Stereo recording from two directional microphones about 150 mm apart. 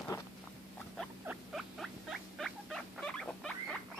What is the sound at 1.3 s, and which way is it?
Rodents, 5° right (ahead or behind).